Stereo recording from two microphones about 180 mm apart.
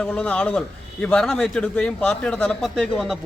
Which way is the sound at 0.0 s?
5° left (ahead or behind).